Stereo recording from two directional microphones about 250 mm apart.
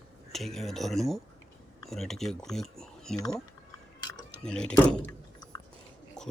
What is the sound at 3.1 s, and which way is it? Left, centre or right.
Speech, centre.